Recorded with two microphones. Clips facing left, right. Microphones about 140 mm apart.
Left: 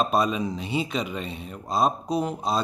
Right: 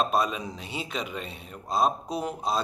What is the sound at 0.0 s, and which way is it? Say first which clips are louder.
Speech: left 3 dB; centre (ahead or behind).